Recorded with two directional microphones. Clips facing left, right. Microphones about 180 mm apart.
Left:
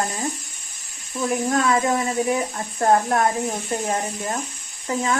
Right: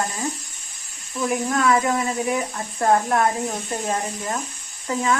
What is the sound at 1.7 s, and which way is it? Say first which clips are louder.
A woman's voice: even; 20° left (ahead or behind).